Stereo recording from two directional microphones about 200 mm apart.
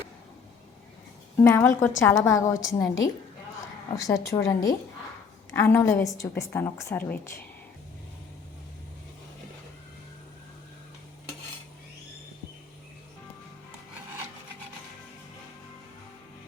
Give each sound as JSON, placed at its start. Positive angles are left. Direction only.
{"t": 1.4, "sound": "a woman's voice", "side_deg": 10}